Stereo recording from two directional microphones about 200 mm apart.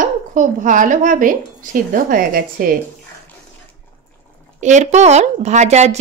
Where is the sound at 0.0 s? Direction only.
40° right (ahead or behind).